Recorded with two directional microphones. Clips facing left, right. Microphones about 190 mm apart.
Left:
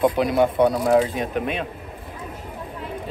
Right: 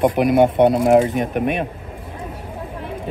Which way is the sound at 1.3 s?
60° right (ahead or behind).